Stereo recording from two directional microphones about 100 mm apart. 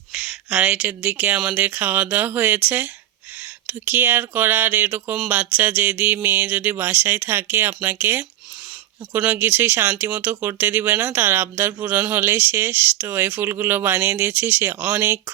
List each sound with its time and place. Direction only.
0.1 s speech: 5° right (ahead or behind); by 5.1 s 20° right (ahead or behind)
5.3 s a sound: 15° right (ahead or behind)
6.2 s speech: 20° right (ahead or behind)